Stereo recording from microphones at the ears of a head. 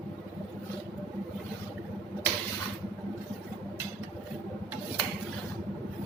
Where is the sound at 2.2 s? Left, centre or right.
Right.